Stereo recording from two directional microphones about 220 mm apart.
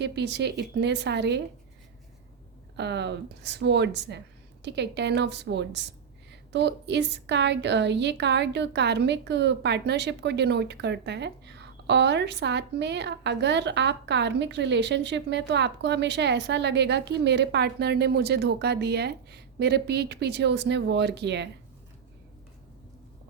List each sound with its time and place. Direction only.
0.0 s a woman's voice: 50° right (ahead or behind)
2.7 s a woman's voice: 50° right (ahead or behind)